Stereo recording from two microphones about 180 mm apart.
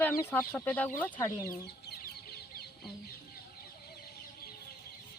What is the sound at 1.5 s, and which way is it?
Chicken, 60° left (ahead or behind).